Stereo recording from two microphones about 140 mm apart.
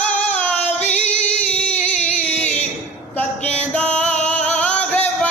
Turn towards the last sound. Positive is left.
turn(degrees=10)  # may be behind; listen again after turning